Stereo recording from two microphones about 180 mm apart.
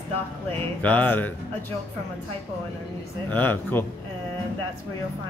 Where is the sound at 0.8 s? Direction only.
10° left (ahead or behind).